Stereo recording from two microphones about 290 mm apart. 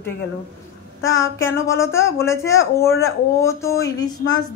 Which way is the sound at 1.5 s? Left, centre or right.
Centre.